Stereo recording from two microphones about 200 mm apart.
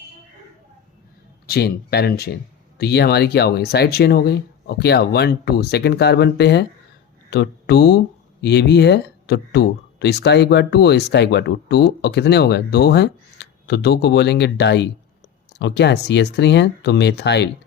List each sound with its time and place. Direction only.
1.5 s speech: 50° left (ahead or behind)